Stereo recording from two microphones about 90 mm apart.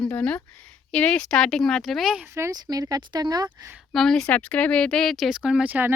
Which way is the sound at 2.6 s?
45° right (ahead or behind).